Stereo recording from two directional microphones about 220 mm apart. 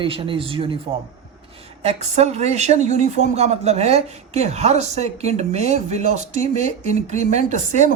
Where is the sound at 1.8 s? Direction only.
30° right (ahead or behind).